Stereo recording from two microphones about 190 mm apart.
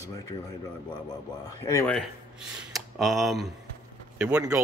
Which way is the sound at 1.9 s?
Centre (ahead or behind).